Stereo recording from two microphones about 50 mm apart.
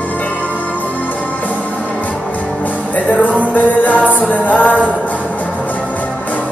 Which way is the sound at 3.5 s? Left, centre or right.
Left.